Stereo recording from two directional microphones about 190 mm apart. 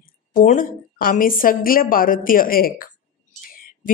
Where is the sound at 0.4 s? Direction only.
45° left (ahead or behind).